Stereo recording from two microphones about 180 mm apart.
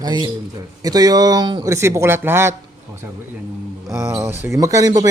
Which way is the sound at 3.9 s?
15° right (ahead or behind).